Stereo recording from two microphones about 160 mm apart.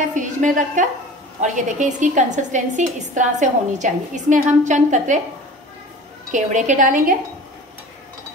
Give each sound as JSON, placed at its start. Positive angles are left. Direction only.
{"t": 0.1, "sound": "a woman's voice", "side_deg": -50}
{"t": 6.3, "sound": "a woman's voice", "side_deg": -50}